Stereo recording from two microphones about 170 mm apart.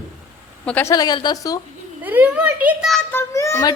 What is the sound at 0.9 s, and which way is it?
Speech, 25° left (ahead or behind).